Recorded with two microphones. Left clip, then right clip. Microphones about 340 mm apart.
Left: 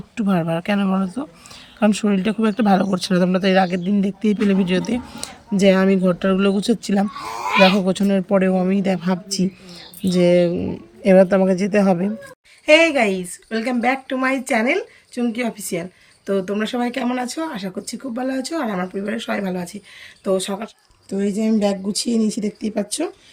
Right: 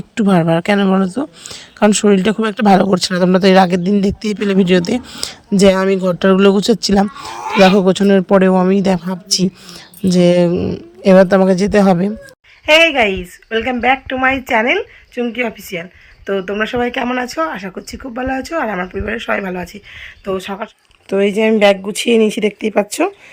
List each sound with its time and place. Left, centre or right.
0.2 s speech: centre
0.9 s speech: right
1.5 s speech: centre
10.1 s speech: centre
12.6 s speech: centre